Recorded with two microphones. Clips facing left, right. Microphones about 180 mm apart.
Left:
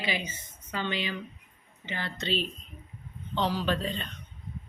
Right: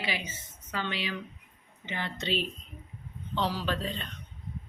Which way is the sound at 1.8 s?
20° right (ahead or behind).